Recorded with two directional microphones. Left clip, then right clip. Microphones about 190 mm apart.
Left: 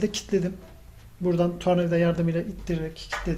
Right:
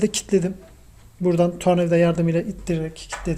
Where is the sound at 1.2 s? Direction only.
45° right (ahead or behind).